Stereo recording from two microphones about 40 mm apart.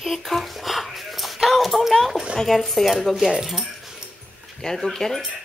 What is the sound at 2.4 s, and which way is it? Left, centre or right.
Speech, centre.